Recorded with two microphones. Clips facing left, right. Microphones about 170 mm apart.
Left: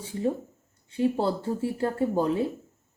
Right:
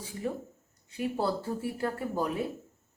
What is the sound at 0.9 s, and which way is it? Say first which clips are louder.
Speech: left 5 dB; 25° left (ahead or behind).